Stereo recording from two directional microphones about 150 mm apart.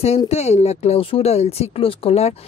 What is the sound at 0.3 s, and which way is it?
Speech, 45° left (ahead or behind).